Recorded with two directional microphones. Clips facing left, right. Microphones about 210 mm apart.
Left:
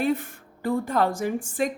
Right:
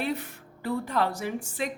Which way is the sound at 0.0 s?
50° left (ahead or behind).